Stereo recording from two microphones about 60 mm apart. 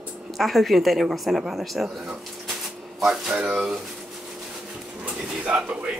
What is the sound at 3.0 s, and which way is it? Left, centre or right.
Speech, centre.